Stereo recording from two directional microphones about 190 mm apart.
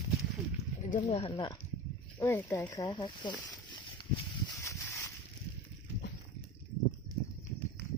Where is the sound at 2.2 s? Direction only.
15° left (ahead or behind).